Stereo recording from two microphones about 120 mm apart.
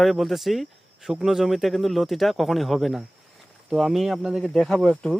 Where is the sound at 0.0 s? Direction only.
Centre (ahead or behind).